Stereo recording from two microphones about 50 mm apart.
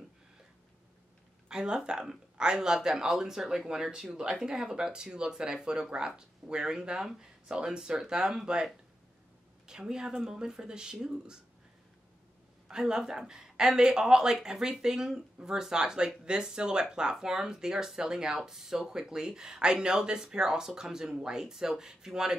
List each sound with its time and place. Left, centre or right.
1.5 s speech: centre
9.7 s speech: centre
12.6 s speech: centre